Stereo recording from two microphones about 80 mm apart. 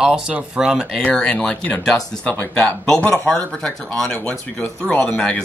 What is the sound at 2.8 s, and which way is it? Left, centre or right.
Speech, centre.